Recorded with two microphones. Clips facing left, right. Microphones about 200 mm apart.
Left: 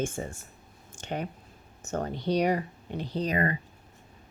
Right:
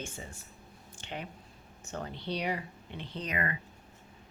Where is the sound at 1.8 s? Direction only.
45° left (ahead or behind).